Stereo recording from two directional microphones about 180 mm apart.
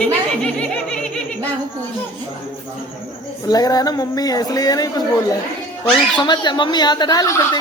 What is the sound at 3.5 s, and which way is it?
Speech, 20° left (ahead or behind).